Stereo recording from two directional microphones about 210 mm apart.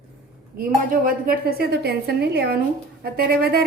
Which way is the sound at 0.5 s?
45° right (ahead or behind).